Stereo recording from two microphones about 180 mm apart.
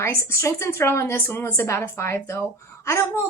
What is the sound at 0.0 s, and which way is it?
A woman's voice, 15° left (ahead or behind).